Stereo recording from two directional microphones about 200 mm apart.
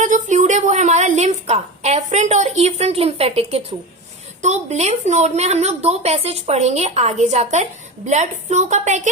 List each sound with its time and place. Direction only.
0.0 s a woman's voice: 35° right (ahead or behind)